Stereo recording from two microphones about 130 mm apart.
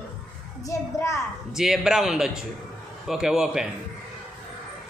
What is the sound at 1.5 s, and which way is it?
A man's voice, 5° right (ahead or behind).